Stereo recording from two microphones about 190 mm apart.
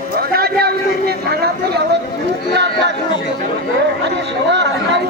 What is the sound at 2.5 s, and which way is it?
Speech, 65° right (ahead or behind).